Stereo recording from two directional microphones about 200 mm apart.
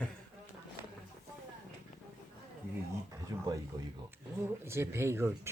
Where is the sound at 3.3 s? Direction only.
15° right (ahead or behind).